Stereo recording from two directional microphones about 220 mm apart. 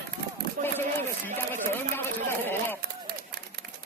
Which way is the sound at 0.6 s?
40° right (ahead or behind).